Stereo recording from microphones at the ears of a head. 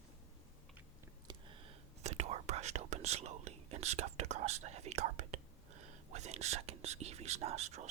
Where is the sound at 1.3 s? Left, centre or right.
Right.